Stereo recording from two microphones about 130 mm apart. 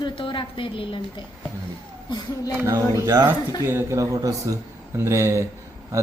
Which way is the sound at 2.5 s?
15° right (ahead or behind).